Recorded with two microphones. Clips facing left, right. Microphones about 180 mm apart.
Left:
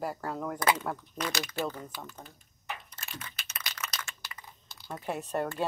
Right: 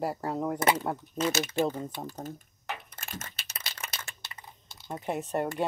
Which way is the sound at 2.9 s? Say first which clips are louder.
Right 3 dB; 50° right (ahead or behind).